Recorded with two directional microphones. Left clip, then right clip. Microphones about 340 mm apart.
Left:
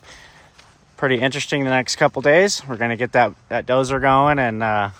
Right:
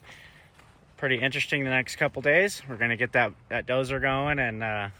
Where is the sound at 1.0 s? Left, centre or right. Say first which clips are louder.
Left 7 dB; centre.